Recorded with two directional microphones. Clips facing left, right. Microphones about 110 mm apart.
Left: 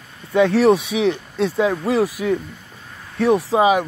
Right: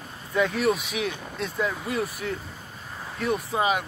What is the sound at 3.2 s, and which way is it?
Speech, 90° left.